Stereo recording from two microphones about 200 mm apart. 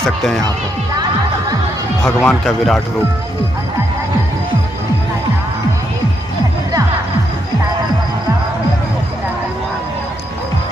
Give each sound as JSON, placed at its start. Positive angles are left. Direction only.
{"t": 0.0, "sound": "speech", "side_deg": 0}
{"t": 2.0, "sound": "speech", "side_deg": 0}